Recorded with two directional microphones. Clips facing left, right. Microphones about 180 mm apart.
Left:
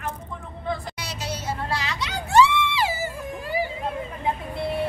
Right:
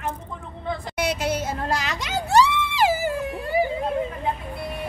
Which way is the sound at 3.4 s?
60° right (ahead or behind).